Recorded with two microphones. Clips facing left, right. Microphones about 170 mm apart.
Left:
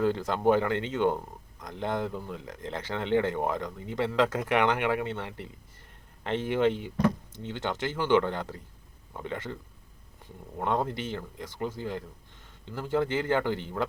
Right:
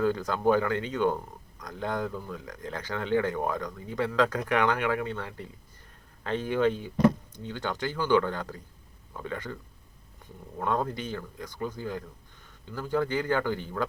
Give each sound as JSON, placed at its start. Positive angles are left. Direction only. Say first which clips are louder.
{"t": 0.0, "sound": "speech", "louder": "even", "side_deg": 25}
{"t": 10.6, "sound": "speech", "louder": "even", "side_deg": 20}